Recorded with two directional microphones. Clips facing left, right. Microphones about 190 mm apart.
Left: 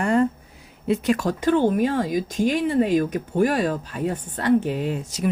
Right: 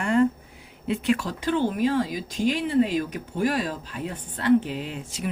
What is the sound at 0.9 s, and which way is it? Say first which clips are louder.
Speech: left 3 dB; 40° left (ahead or behind).